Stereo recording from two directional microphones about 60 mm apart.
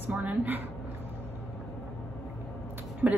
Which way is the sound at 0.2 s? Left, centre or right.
Right.